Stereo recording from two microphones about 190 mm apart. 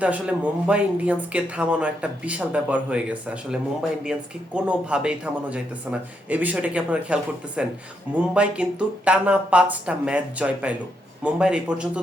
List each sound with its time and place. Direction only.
0.0 s speech: 5° right (ahead or behind)